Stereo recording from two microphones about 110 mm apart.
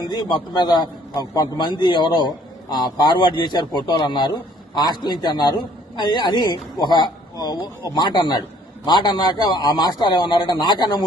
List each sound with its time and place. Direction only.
0.1 s a man's voice: 40° left (ahead or behind)